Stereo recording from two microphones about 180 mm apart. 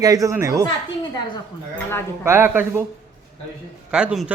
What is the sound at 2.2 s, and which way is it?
Speech, 10° right (ahead or behind).